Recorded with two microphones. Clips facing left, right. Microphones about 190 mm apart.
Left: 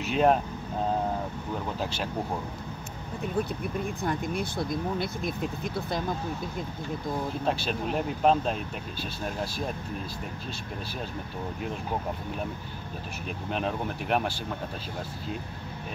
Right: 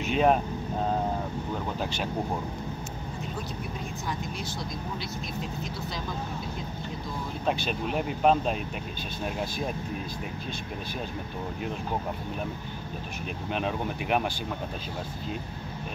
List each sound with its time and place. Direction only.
0.1 s speech: centre (ahead or behind)
4.0 s speech: 55° left (ahead or behind)
7.4 s speech: centre (ahead or behind)
13.5 s speech: centre (ahead or behind)